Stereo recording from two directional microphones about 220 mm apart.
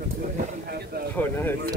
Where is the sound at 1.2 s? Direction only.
10° left (ahead or behind).